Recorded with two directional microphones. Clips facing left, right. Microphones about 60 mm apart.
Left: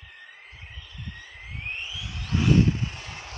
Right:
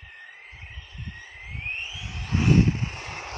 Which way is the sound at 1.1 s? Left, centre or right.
Right.